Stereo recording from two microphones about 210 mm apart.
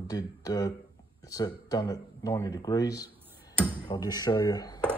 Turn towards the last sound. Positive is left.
turn(degrees=20)  # may be behind; listen again after turning